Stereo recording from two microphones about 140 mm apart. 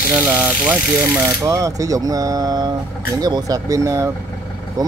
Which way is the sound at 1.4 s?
25° right (ahead or behind).